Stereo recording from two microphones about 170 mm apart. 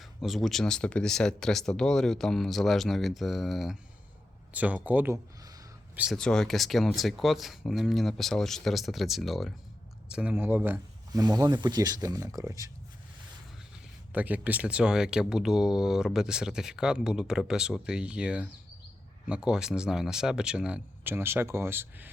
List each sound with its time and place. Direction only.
0.0 s speech: centre (ahead or behind)
6.0 s speech: centre (ahead or behind); by 12.7 s 20° right (ahead or behind)
14.1 s speech: 10° right (ahead or behind)